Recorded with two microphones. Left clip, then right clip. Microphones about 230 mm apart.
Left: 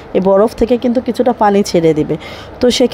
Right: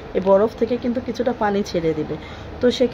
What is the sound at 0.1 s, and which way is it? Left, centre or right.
Speech, left.